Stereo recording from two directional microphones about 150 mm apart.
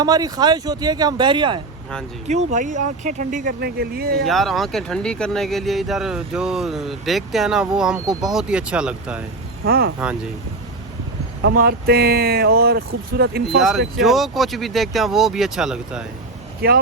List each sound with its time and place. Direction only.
0.0 s speech: 25° right (ahead or behind)
2.2 s speech: 50° right (ahead or behind); by 4.1 s 90° right
4.3 s speech: centre (ahead or behind)
9.6 s speech: 80° right
11.5 s speech: 80° right
13.6 s speech: centre (ahead or behind)
16.6 s speech: 85° right